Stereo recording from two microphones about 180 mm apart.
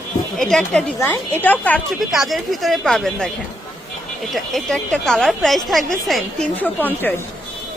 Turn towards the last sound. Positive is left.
turn(degrees=10)  # may be behind; listen again after turning